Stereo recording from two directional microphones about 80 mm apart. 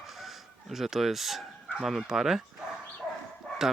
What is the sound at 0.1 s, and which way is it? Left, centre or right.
Speech, centre.